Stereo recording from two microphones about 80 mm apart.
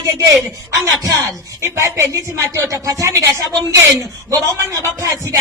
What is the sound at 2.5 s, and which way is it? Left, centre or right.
Speech, right.